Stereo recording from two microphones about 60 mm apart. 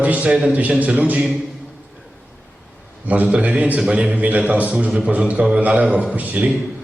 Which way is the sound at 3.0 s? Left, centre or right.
Right.